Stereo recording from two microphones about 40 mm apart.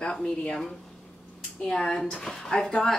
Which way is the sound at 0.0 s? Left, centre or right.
Left.